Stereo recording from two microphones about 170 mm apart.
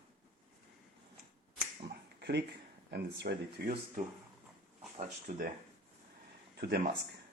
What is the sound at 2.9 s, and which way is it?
Speech, 70° right (ahead or behind).